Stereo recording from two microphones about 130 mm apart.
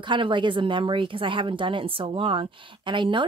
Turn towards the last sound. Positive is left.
turn(degrees=-40)  # may be behind; listen again after turning